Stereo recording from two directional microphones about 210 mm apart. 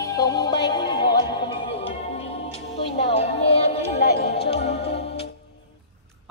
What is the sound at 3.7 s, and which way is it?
Music, 30° left (ahead or behind).